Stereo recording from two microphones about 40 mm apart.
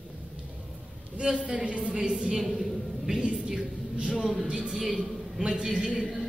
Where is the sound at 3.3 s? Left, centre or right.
Centre.